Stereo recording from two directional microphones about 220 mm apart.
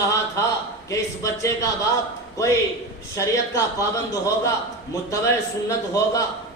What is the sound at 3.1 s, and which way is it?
A man's voice, 15° left (ahead or behind).